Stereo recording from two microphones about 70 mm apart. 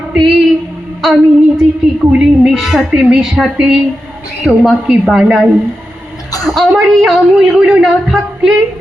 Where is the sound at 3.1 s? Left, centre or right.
Centre.